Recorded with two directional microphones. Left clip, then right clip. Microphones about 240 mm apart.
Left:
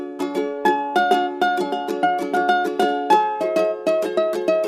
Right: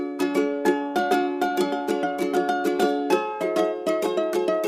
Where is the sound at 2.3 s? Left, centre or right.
Centre.